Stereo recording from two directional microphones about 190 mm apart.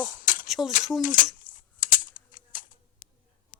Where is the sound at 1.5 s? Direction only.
45° left (ahead or behind).